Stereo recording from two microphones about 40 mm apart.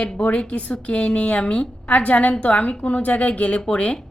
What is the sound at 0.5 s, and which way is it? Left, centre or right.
A woman's voice, left.